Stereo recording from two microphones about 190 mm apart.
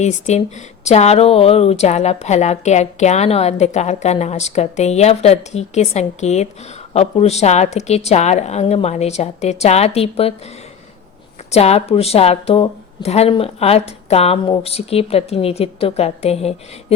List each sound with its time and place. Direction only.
0.0 s speech: 35° left (ahead or behind)
11.5 s speech: 35° left (ahead or behind)